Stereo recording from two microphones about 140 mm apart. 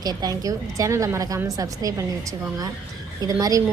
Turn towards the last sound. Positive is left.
turn(degrees=-25)  # may be behind; listen again after turning